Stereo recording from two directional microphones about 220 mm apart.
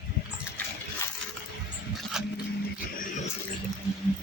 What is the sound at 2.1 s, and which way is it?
Dog, centre (ahead or behind).